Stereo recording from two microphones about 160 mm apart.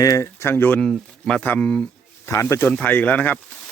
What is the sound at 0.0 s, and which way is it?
Speech, 20° left (ahead or behind).